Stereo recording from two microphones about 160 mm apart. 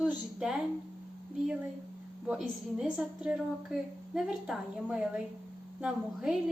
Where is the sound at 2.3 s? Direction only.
5° right (ahead or behind).